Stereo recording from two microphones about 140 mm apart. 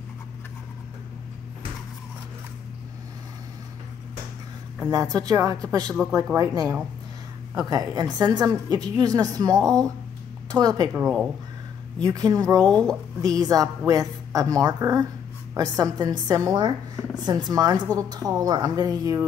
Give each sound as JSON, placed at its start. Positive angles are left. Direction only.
{"t": 4.9, "sound": "a woman's voice", "side_deg": -25}
{"t": 10.9, "sound": "speech", "side_deg": -5}
{"t": 12.0, "sound": "a woman's voice", "side_deg": -30}